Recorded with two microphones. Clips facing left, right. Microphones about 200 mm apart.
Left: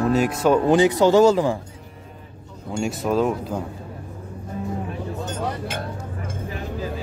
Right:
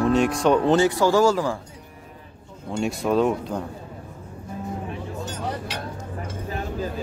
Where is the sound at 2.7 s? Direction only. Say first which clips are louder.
Even; centre (ahead or behind).